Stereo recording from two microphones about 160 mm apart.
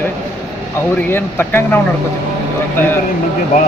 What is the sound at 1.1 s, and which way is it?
Speech, 15° left (ahead or behind).